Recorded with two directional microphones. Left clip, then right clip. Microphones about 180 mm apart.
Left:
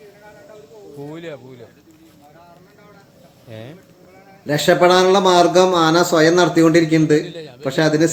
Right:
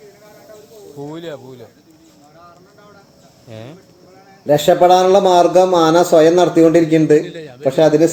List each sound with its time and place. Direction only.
0.9 s speech: 15° right (ahead or behind)
3.5 s speech: centre (ahead or behind)
7.3 s a man's voice: 50° right (ahead or behind)
7.6 s speech: centre (ahead or behind)